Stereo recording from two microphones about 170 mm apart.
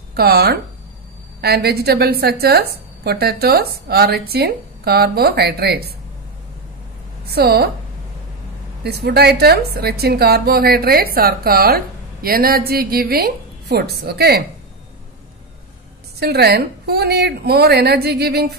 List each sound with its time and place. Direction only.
0.1 s a woman's voice: 70° right (ahead or behind)
7.2 s a woman's voice: 70° right (ahead or behind)
8.8 s a woman's voice: 70° right (ahead or behind)
16.2 s a woman's voice: 70° right (ahead or behind)